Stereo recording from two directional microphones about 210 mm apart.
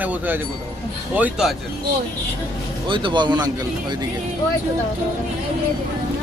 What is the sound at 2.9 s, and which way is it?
Speech, 20° right (ahead or behind).